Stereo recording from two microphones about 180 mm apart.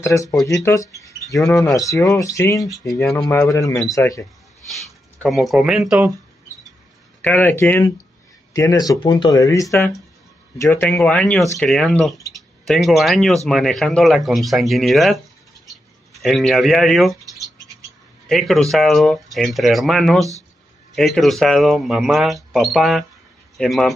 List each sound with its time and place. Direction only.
0.0 s speech: 15° left (ahead or behind)
3.1 s speech: 5° left (ahead or behind)
5.2 s speech: centre (ahead or behind)
7.2 s speech: 10° left (ahead or behind)
15.6 s bird: centre (ahead or behind)
18.3 s speech: centre (ahead or behind)